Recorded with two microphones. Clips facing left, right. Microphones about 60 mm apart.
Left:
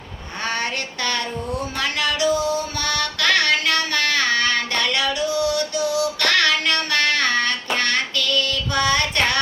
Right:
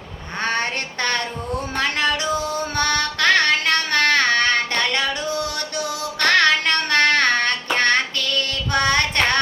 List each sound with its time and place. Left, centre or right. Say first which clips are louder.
0.4 s a sound: right 2 dB; right
1.7 s music: right 4 dB; right
6.1 s child singing: right 8 dB; right